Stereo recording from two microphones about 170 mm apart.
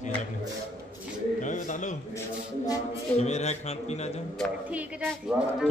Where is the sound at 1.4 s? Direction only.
45° left (ahead or behind).